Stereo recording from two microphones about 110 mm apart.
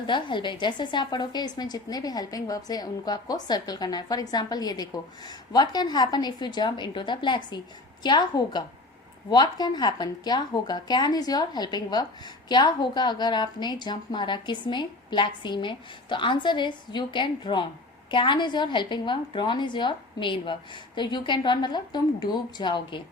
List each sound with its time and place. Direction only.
0.1 s a woman's voice: 45° left (ahead or behind)